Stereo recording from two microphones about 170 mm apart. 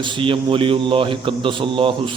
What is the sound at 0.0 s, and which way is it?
A man's voice, 30° right (ahead or behind).